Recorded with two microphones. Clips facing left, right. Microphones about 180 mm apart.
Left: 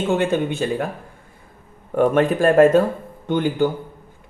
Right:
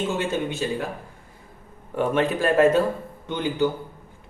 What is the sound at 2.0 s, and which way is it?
Speech, 50° left (ahead or behind).